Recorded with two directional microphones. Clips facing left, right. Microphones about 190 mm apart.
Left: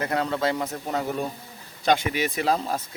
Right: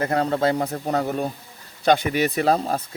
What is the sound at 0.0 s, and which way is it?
Speech, 35° right (ahead or behind).